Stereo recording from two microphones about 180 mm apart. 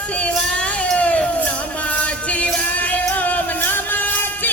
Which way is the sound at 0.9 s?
5° left (ahead or behind).